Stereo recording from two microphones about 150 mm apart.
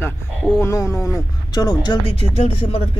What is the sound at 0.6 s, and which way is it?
Speech, 20° left (ahead or behind).